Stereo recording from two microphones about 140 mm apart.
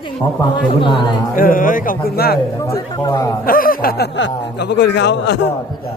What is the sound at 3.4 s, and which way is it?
Speech, 90° left.